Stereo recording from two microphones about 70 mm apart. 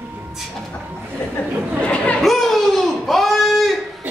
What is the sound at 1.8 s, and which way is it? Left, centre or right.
Chatter, centre.